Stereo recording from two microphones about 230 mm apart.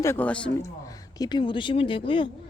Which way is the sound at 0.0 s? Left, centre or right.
Centre.